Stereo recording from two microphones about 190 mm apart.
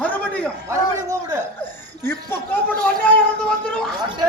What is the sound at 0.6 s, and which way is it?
Speech, 15° right (ahead or behind).